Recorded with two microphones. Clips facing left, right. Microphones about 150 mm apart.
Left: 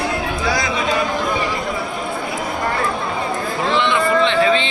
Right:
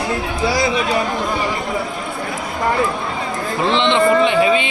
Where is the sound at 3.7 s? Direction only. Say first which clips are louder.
Right 3 dB; 20° right (ahead or behind).